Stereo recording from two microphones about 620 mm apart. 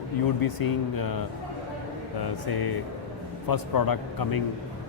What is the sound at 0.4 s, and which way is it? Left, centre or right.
Speech, left.